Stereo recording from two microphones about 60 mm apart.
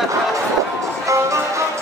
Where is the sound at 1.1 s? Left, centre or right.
Right.